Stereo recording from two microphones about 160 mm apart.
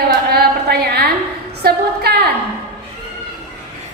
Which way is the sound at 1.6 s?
80° right.